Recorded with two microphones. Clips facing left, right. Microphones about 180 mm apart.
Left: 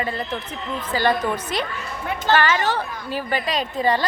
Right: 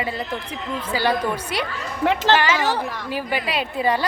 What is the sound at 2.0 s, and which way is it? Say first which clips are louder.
Speech: right 4 dB; 90° right.